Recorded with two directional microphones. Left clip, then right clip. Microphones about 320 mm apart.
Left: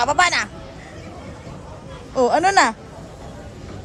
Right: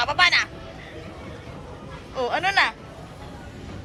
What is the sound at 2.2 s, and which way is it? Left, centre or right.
Speech, centre.